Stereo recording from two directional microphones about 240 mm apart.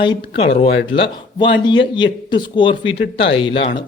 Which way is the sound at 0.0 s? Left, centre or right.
Left.